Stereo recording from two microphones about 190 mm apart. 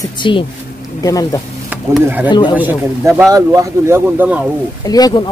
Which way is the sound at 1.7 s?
10° right (ahead or behind).